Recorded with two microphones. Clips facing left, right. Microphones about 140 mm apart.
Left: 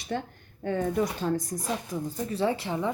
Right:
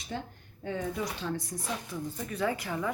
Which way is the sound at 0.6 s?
50° left (ahead or behind).